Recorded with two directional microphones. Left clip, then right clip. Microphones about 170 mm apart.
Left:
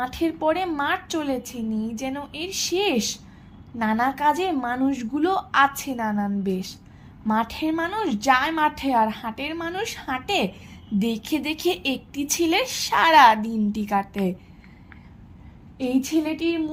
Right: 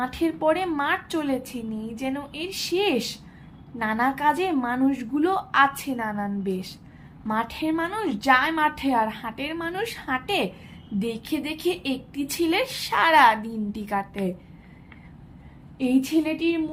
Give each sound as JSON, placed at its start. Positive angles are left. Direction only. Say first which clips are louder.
{"t": 0.0, "sound": "a woman's voice", "louder": "even", "side_deg": 25}
{"t": 11.0, "sound": "a woman's voice", "louder": "left 2 dB", "side_deg": 40}
{"t": 15.8, "sound": "a woman's voice", "louder": "right 1 dB", "side_deg": 25}